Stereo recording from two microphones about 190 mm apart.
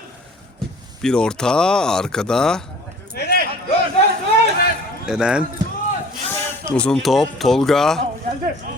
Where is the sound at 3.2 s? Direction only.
55° left (ahead or behind).